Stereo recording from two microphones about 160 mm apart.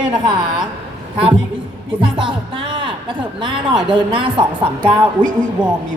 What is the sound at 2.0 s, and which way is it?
Music, 30° right (ahead or behind).